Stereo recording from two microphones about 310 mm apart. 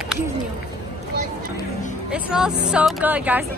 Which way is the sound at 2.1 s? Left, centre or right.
Centre.